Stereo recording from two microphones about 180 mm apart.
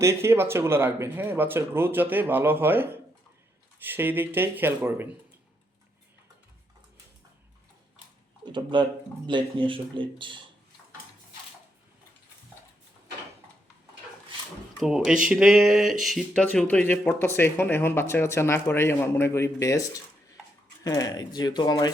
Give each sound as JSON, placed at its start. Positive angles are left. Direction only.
{"t": 0.0, "sound": "speech", "side_deg": -15}
{"t": 8.7, "sound": "speech", "side_deg": -25}
{"t": 14.8, "sound": "speech", "side_deg": -5}